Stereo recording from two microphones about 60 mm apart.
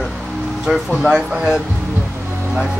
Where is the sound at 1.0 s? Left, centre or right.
Centre.